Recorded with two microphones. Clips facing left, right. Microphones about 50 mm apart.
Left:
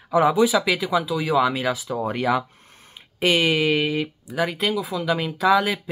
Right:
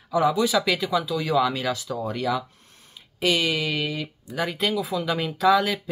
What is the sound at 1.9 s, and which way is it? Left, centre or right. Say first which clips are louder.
Speech: left 6 dB; left.